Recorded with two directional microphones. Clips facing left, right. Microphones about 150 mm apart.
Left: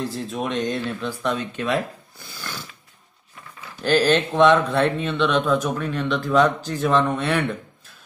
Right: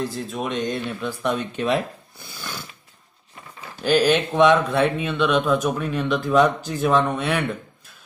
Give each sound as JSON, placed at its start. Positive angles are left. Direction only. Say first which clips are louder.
{"t": 0.0, "sound": "speech", "louder": "even", "side_deg": 0}
{"t": 1.0, "sound": "speech", "louder": "right 1 dB", "side_deg": -15}
{"t": 2.3, "sound": "snoring", "louder": "even", "side_deg": -15}
{"t": 3.8, "sound": "speech", "louder": "even", "side_deg": -10}